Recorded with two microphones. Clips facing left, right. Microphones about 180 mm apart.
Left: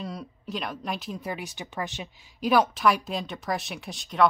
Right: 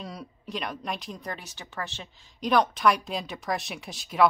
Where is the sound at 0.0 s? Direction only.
Centre (ahead or behind).